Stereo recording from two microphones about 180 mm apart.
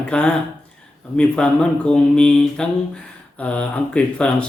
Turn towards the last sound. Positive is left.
turn(degrees=5)  # may be behind; listen again after turning